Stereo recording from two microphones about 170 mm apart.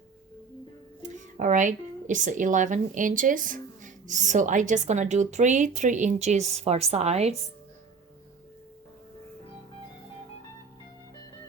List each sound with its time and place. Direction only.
1.4 s a woman's voice: 45° right (ahead or behind)